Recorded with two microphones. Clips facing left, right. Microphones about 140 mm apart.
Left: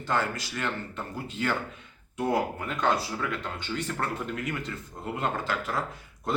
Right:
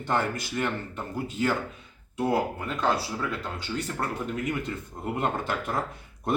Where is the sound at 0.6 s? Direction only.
10° right (ahead or behind).